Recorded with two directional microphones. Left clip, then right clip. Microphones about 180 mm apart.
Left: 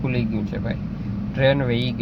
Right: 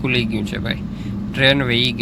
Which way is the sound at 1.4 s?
10° left (ahead or behind).